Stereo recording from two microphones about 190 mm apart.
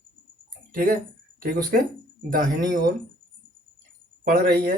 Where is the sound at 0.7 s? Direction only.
50° right (ahead or behind).